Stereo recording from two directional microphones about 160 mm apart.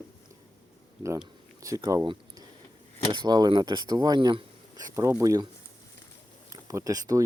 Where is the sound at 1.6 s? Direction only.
20° right (ahead or behind).